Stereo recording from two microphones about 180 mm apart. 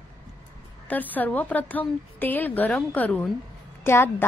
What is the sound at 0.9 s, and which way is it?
A woman's voice, 10° left (ahead or behind).